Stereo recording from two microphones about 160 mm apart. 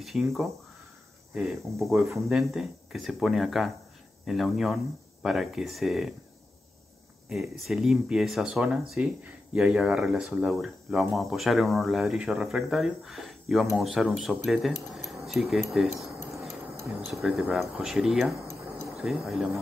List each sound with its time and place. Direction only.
0.0 s speech: centre (ahead or behind)
7.2 s speech: centre (ahead or behind)
17.1 s speech: centre (ahead or behind)
18.5 s a sound: 15° right (ahead or behind)
18.9 s speech: centre (ahead or behind)